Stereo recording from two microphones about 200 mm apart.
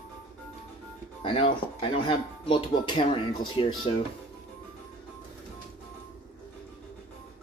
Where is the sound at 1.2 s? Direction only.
25° left (ahead or behind).